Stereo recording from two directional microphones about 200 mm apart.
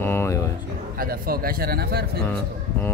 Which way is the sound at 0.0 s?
10° left (ahead or behind).